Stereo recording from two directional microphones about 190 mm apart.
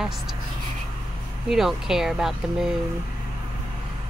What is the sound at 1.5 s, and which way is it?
A woman's voice, centre (ahead or behind).